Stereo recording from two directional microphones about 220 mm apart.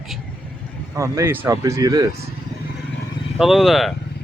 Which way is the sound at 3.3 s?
Centre (ahead or behind).